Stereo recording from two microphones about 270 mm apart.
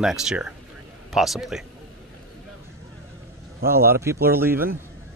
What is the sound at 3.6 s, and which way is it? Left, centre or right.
Speech, right.